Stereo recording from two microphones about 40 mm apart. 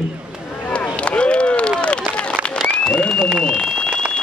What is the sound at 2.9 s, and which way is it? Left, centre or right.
Applause, left.